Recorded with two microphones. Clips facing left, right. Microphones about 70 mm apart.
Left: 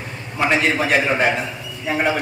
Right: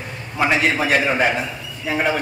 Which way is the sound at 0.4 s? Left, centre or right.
Centre.